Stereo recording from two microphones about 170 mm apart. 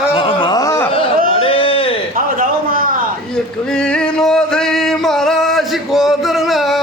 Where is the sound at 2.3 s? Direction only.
55° right (ahead or behind).